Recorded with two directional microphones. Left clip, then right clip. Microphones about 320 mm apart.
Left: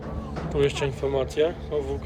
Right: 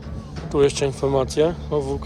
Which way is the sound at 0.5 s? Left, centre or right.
Centre.